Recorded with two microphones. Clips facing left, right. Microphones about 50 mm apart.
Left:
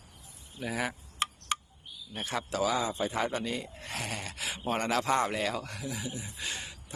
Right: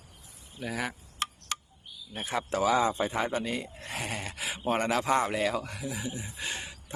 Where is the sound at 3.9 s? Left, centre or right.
Centre.